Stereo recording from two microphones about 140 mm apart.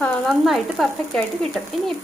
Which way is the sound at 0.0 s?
Centre (ahead or behind).